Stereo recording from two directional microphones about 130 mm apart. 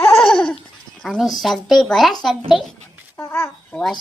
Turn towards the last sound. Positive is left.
turn(degrees=15)  # may be behind; listen again after turning